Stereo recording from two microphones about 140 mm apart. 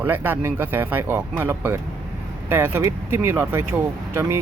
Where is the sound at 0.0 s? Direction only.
15° right (ahead or behind).